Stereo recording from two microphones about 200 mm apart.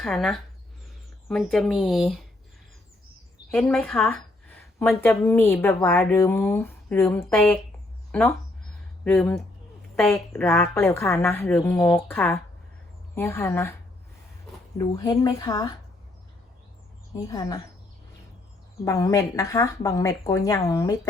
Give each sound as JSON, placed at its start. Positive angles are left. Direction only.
{"t": 0.0, "sound": "speech", "side_deg": 0}
{"t": 3.5, "sound": "a woman's voice", "side_deg": 5}
{"t": 9.9, "sound": "a woman's voice", "side_deg": 10}
{"t": 14.8, "sound": "a woman's voice", "side_deg": 20}
{"t": 17.2, "sound": "a woman's voice", "side_deg": 20}
{"t": 18.9, "sound": "a woman's voice", "side_deg": 15}